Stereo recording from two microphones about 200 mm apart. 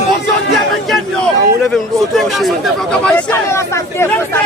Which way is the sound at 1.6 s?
Centre (ahead or behind).